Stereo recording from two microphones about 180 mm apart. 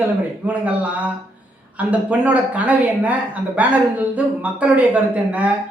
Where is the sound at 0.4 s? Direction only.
10° right (ahead or behind).